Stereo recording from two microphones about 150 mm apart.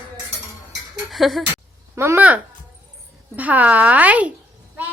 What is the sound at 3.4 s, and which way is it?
Speech, 10° right (ahead or behind).